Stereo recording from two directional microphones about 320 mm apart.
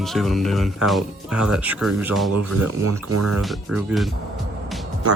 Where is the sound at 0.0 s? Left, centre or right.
Centre.